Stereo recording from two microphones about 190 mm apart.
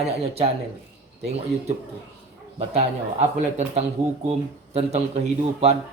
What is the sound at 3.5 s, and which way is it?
Speech, 35° right (ahead or behind).